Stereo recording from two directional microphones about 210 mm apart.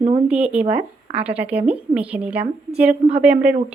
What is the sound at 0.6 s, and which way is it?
Speech, 25° right (ahead or behind).